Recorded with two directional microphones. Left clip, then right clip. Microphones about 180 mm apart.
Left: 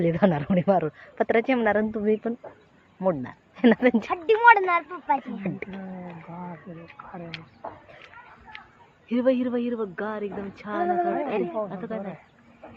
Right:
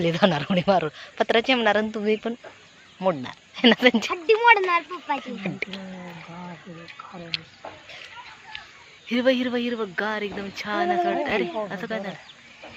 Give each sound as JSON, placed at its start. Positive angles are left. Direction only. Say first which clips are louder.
{"t": 0.0, "sound": "speech", "louder": "right 2 dB", "side_deg": 5}
{"t": 9.0, "sound": "speech", "louder": "right 2 dB", "side_deg": -5}
{"t": 10.8, "sound": "speech", "louder": "right 1 dB", "side_deg": -25}